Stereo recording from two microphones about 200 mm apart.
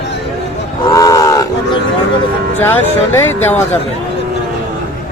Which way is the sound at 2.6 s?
10° left (ahead or behind).